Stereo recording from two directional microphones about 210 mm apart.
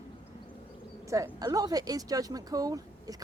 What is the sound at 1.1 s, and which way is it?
Speech, 15° right (ahead or behind).